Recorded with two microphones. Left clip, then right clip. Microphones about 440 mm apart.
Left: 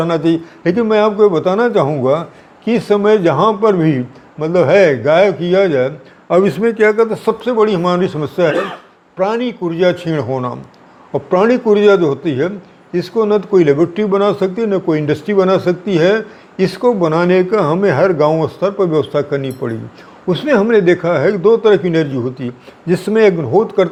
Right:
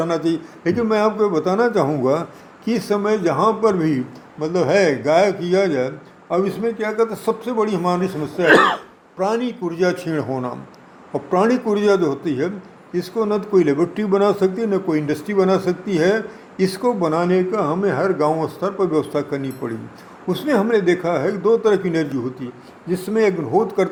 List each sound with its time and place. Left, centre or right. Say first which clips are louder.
0.0 s a man's voice: left 6 dB; left
2.6 s a man's voice: left 8 dB; left
6.2 s a man's voice: left 8 dB; left
22.9 s a man's voice: left 7 dB; left